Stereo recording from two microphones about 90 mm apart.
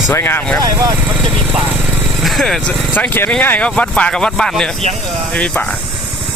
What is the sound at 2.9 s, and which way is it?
Speech, 20° left (ahead or behind).